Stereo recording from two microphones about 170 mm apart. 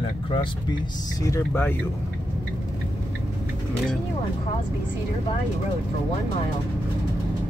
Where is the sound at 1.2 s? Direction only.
15° left (ahead or behind).